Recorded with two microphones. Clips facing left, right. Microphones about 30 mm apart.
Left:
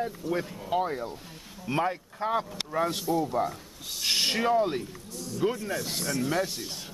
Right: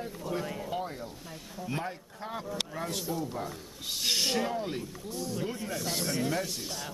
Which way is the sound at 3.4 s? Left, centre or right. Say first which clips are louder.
Left 9 dB; centre.